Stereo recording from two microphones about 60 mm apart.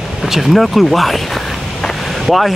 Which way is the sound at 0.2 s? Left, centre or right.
Centre.